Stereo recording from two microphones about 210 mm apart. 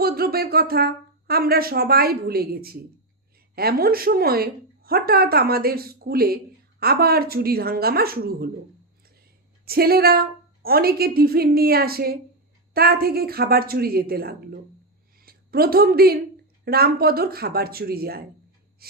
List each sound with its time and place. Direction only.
0.0 s speech: 45° right (ahead or behind)
9.6 s a woman's voice: 45° right (ahead or behind)
18.8 s gasp: 45° right (ahead or behind)